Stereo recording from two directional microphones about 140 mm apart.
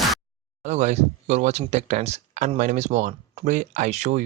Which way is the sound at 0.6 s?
55° right (ahead or behind).